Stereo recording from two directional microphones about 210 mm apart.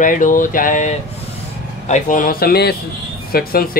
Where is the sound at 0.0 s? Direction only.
40° left (ahead or behind).